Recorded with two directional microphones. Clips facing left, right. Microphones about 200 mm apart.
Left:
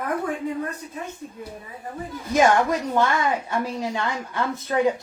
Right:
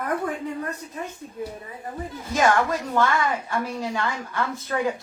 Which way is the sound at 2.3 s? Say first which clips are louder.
Left 3 dB; 15° left (ahead or behind).